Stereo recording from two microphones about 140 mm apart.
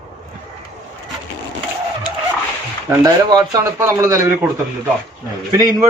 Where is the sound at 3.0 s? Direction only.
30° right (ahead or behind).